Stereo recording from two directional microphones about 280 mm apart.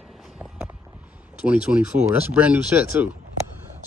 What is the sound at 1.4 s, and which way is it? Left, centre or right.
Speech, centre.